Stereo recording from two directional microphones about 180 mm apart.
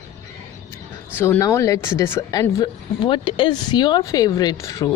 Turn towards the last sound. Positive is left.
turn(degrees=15)  # may be behind; listen again after turning